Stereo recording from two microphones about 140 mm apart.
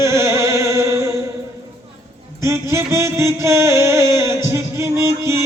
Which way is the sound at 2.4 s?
20° right (ahead or behind).